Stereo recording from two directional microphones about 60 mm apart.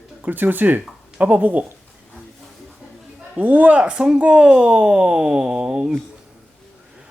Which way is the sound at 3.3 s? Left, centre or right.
Right.